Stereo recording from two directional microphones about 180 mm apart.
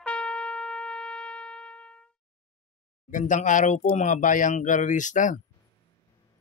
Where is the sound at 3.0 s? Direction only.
45° left (ahead or behind).